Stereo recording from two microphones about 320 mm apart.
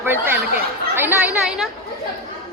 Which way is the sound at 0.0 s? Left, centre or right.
Centre.